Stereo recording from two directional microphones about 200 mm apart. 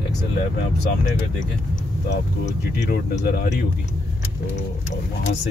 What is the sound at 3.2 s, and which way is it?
Speech, 40° left (ahead or behind).